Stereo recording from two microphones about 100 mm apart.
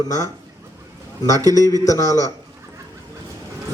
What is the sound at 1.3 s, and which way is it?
Speech, 35° right (ahead or behind).